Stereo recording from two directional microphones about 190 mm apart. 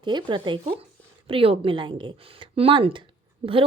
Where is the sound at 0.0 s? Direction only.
25° right (ahead or behind).